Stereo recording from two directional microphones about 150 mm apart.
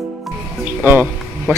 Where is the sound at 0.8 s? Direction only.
15° right (ahead or behind).